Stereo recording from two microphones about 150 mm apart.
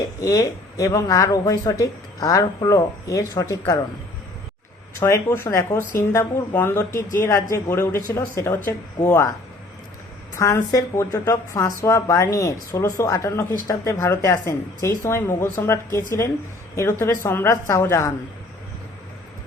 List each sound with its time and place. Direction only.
0.2 s speech: 20° left (ahead or behind)
4.9 s speech: 20° left (ahead or behind)
10.3 s speech: 20° left (ahead or behind)